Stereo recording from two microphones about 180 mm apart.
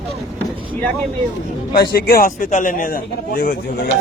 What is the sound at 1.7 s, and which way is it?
Speech, 60° left (ahead or behind).